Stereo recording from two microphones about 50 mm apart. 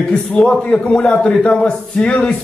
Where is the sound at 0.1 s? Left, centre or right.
Centre.